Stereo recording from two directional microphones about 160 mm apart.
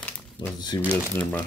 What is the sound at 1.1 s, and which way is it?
Speech, 10° left (ahead or behind).